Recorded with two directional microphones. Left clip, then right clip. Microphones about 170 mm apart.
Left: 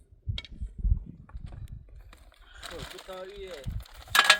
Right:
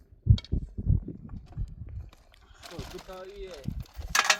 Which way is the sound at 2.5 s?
5° left (ahead or behind).